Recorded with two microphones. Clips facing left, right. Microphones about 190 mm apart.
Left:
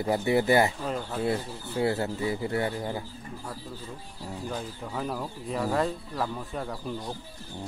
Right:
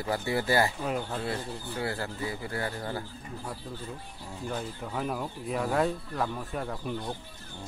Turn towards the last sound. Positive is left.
turn(degrees=0)  # may be behind; listen again after turning